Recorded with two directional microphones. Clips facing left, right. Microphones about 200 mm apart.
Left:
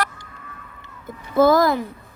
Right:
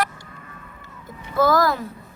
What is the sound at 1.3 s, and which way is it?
Speech, 20° left (ahead or behind).